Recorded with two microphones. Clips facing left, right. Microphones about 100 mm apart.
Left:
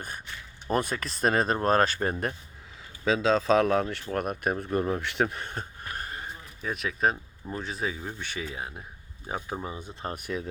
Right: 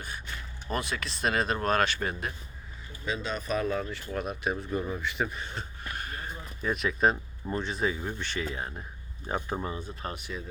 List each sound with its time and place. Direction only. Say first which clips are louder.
0.7 s speech: left 5 dB; 45° left (ahead or behind)
3.0 s speech: left 9 dB; 90° left; by 6.1 s 45° left (ahead or behind)
6.6 s speech: right 2 dB; centre (ahead or behind)
10.2 s speech: left 6 dB; 60° left (ahead or behind)